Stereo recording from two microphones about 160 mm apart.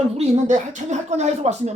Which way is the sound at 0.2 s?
50° right (ahead or behind).